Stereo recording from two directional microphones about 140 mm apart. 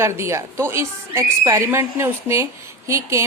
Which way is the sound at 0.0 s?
20° right (ahead or behind).